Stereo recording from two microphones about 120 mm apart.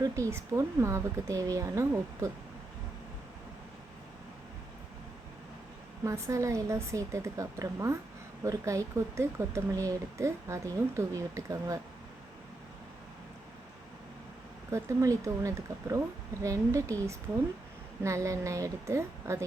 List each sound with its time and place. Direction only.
0.0 s speech: 25° right (ahead or behind)
6.1 s speech: 25° right (ahead or behind)
14.7 s speech: 25° right (ahead or behind)